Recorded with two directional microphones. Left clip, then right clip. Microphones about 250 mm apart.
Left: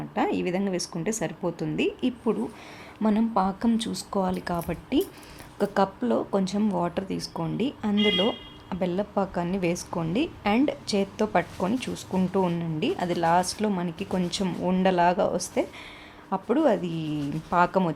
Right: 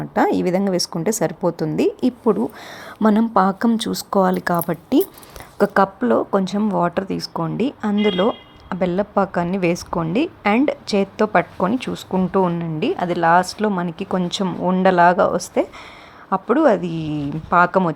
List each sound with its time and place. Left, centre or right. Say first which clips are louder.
0.1 s a woman's voice: right 9 dB; right